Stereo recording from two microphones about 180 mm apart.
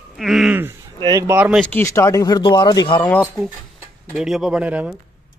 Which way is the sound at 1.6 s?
10° left (ahead or behind).